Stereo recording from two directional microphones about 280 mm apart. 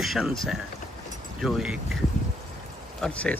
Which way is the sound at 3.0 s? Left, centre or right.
Centre.